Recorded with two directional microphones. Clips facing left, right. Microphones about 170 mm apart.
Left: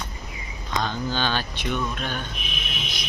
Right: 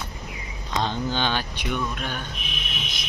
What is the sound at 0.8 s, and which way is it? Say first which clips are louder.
Speech: right 1 dB; 25° right (ahead or behind).